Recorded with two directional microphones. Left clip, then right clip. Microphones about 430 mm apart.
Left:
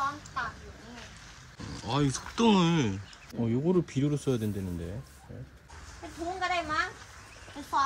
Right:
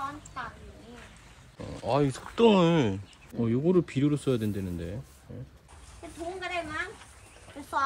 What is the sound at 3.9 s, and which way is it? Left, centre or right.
Speech, centre.